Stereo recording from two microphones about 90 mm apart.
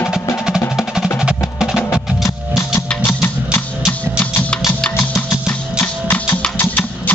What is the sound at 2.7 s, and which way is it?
Music, 25° left (ahead or behind).